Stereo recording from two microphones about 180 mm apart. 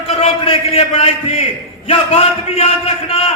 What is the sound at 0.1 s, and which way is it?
A man's voice, 35° left (ahead or behind).